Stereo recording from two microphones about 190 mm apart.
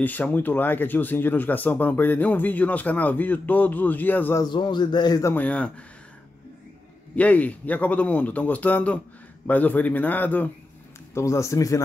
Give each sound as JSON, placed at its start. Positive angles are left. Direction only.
{"t": 0.0, "sound": "speech", "side_deg": 10}
{"t": 4.5, "sound": "speech", "side_deg": 25}
{"t": 7.2, "sound": "speech", "side_deg": 5}